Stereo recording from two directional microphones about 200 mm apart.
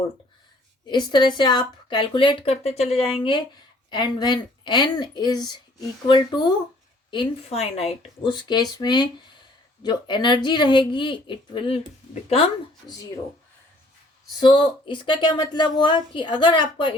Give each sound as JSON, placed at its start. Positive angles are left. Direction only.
{"t": 0.9, "sound": "speech", "side_deg": 20}
{"t": 14.3, "sound": "speech", "side_deg": 25}